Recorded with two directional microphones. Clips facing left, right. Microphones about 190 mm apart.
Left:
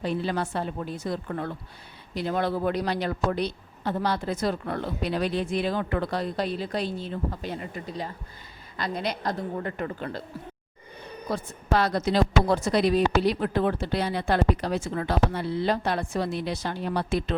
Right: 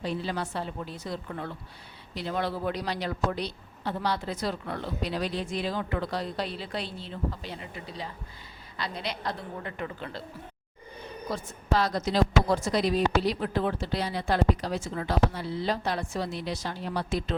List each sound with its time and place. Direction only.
0.0 s a woman's voice: 55° left (ahead or behind)
11.3 s speech: 60° left (ahead or behind)